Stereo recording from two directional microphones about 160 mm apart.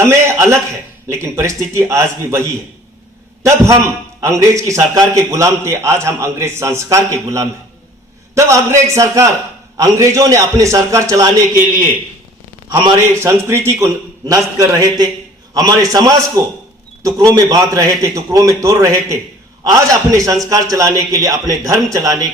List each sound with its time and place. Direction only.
0.0 s a sound: 20° right (ahead or behind)
1.1 s a man's voice: 15° right (ahead or behind)
4.2 s a man's voice: 20° right (ahead or behind)
13.1 s a man's voice: 15° right (ahead or behind)